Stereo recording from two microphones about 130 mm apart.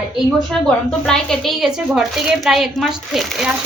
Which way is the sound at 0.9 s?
5° left (ahead or behind).